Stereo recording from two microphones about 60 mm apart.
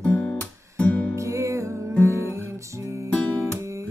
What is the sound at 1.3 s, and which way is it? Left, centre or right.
Music, right.